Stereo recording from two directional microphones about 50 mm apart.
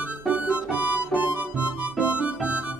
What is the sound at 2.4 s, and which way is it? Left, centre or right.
Music, right.